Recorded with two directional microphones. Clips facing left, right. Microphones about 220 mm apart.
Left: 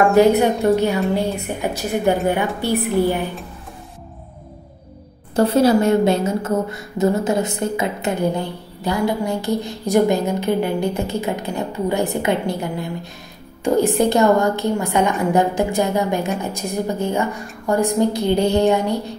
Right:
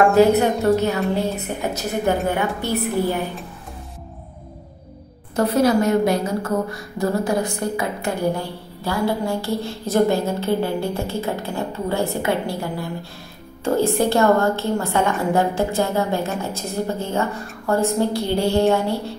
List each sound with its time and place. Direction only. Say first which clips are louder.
0.1 s a woman's voice: left 1 dB; 15° left (ahead or behind)
5.3 s a woman's voice: left 3 dB; 30° left (ahead or behind)